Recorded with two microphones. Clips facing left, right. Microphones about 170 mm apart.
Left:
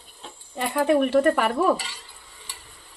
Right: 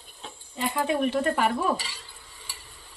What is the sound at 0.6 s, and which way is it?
Stir, 65° left (ahead or behind).